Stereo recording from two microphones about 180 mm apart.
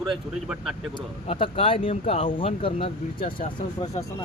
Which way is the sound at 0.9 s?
30° left (ahead or behind).